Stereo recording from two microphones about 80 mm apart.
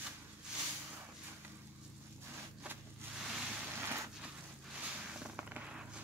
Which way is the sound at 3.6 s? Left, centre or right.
Right.